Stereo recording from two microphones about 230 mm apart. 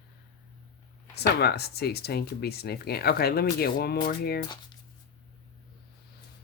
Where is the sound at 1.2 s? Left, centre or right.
Left.